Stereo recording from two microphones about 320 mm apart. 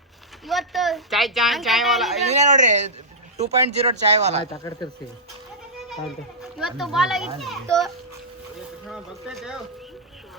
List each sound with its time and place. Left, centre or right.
0.4 s speech: centre
2.2 s speech: right
4.5 s speech: centre
5.9 s speech: centre
8.9 s speech: centre